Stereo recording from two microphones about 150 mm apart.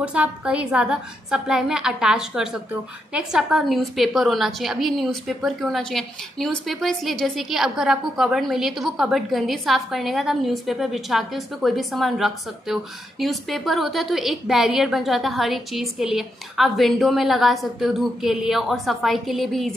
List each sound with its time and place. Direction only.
0.0 s a woman's voice: 10° right (ahead or behind)